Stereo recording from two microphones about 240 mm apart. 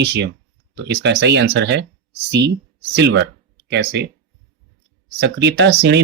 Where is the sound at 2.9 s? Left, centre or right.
Right.